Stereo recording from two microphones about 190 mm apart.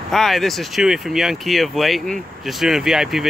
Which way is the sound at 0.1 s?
Centre (ahead or behind).